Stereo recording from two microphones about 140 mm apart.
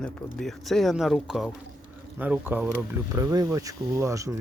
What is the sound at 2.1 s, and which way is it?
Speech, 10° right (ahead or behind).